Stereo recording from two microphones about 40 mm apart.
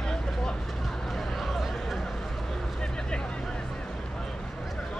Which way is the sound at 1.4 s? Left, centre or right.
Centre.